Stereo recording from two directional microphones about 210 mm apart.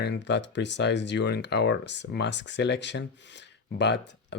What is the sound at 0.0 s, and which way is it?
Speech, 55° left (ahead or behind).